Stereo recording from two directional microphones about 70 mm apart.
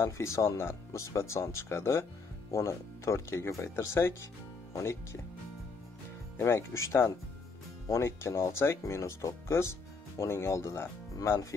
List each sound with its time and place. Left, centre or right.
0.0 s speech: left
6.3 s speech: left